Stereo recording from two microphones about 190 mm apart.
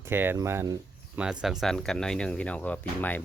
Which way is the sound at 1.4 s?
Centre (ahead or behind).